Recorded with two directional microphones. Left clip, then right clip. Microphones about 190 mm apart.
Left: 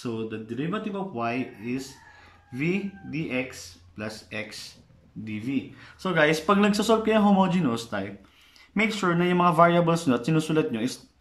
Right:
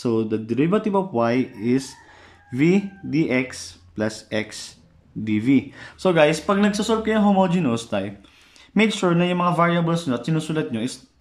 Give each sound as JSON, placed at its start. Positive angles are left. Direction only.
{"t": 0.0, "sound": "speech", "side_deg": -35}
{"t": 5.9, "sound": "speech", "side_deg": -25}
{"t": 6.1, "sound": "speech", "side_deg": -5}